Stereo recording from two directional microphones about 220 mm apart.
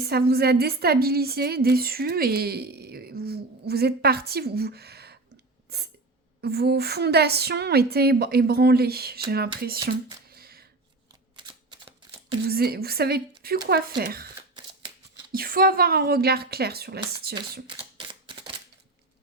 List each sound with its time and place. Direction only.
0.0 s a woman's voice: 45° right (ahead or behind)
10.3 s a sound: 45° right (ahead or behind)
11.3 s typewriter: 20° right (ahead or behind)
12.5 s a woman's voice: 45° right (ahead or behind)
15.3 s a woman's voice: 40° right (ahead or behind)
17.9 s single-lens reflex camera: 25° right (ahead or behind)